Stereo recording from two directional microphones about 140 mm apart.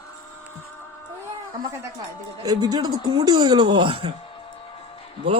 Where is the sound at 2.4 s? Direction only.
30° right (ahead or behind).